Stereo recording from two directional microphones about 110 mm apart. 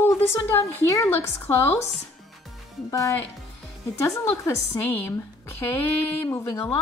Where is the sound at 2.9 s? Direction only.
30° left (ahead or behind).